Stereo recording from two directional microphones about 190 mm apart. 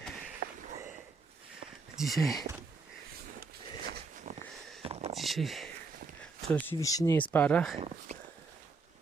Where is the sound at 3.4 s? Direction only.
50° right (ahead or behind).